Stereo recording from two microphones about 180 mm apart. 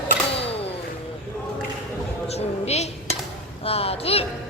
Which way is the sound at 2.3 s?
35° left (ahead or behind).